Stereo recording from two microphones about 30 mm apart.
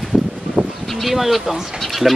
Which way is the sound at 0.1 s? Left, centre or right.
Right.